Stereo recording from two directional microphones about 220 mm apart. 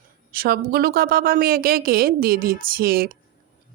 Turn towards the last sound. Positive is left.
turn(degrees=-45)  # may be behind; listen again after turning